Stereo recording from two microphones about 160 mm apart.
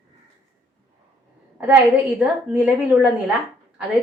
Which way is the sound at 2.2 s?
10° right (ahead or behind).